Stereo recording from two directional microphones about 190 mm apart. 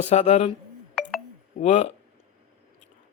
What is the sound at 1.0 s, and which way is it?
Telephone dialing, 5° left (ahead or behind).